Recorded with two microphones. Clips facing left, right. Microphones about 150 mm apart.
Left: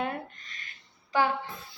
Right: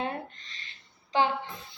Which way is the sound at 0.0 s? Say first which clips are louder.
Left 1 dB; 25° right (ahead or behind).